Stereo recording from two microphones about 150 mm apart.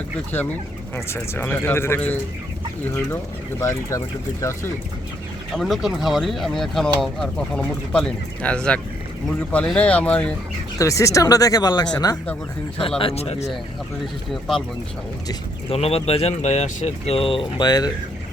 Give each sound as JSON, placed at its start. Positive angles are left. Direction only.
{"t": 0.9, "sound": "speech", "side_deg": 15}
{"t": 3.6, "sound": "speech", "side_deg": 20}
{"t": 5.5, "sound": "speech", "side_deg": 0}
{"t": 10.8, "sound": "speech", "side_deg": 20}
{"t": 13.0, "sound": "speech", "side_deg": 40}
{"t": 15.7, "sound": "speech", "side_deg": 40}